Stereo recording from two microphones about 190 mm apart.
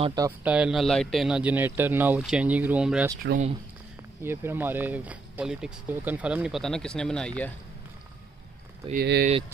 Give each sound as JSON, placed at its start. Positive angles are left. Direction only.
{"t": 0.0, "sound": "speech", "side_deg": -20}
{"t": 0.4, "sound": "speech", "side_deg": -5}
{"t": 4.2, "sound": "speech", "side_deg": -10}
{"t": 8.9, "sound": "speech", "side_deg": -55}